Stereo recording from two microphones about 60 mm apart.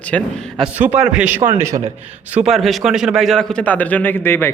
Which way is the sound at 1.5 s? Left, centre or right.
Right.